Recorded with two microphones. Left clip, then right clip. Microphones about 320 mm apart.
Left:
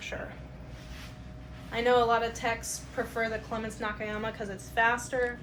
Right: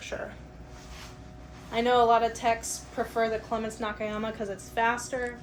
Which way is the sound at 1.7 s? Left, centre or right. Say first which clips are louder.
Right 3 dB; right.